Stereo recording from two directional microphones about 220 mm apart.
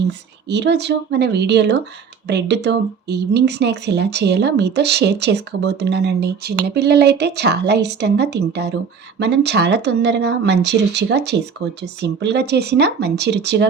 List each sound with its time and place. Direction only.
0.4 s speech: 50° right (ahead or behind)